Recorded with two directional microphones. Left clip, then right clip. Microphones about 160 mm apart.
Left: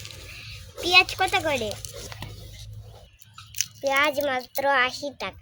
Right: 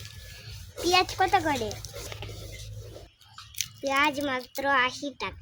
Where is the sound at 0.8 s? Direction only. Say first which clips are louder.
Left 4 dB; 25° right (ahead or behind).